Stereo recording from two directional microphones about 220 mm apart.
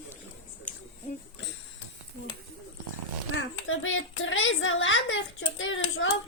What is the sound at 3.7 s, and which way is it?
A woman's voice, 65° left (ahead or behind).